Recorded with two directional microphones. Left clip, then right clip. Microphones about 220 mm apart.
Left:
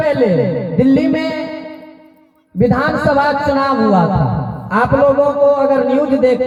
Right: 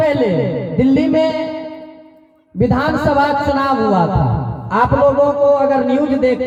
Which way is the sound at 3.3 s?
20° right (ahead or behind).